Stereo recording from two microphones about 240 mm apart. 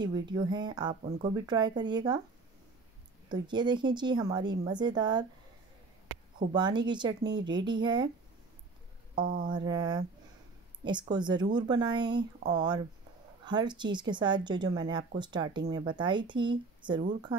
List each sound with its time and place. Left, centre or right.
0.0 s speech: centre
3.3 s speech: centre
6.5 s speech: centre
9.2 s speech: right
9.5 s speech: centre